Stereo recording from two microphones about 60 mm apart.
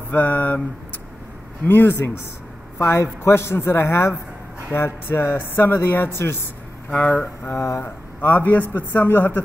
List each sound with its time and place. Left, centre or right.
0.1 s speech: left
1.7 s a man's voice: left
6.9 s speech: left
7.4 s speech: left
7.8 s speech: left